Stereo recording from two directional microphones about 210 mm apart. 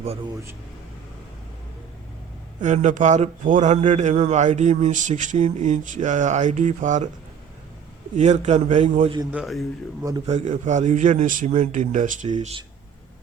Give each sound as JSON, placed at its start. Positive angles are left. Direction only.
{"t": 2.6, "sound": "a man's voice", "side_deg": -35}
{"t": 8.1, "sound": "a man's voice", "side_deg": -35}
{"t": 9.3, "sound": "a man's voice", "side_deg": 0}
{"t": 10.2, "sound": "a man's voice", "side_deg": -35}